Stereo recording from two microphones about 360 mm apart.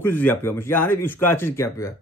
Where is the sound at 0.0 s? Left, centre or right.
Centre.